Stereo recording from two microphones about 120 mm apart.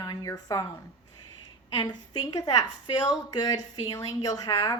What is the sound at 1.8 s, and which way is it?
A woman's voice, 35° left (ahead or behind).